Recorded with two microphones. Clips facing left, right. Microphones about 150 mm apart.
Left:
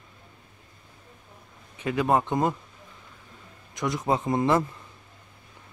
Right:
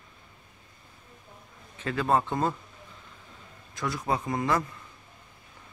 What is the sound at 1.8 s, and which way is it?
Speech, 15° left (ahead or behind).